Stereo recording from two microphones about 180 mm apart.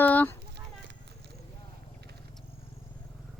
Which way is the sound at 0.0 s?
10° left (ahead or behind).